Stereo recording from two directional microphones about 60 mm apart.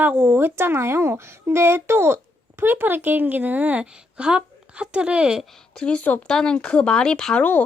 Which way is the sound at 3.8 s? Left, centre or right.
Centre.